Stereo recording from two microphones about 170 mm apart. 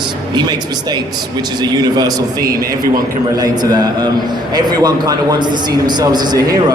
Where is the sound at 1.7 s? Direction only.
20° right (ahead or behind).